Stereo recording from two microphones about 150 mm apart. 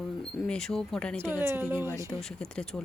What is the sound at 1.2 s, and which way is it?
Speech, 15° right (ahead or behind).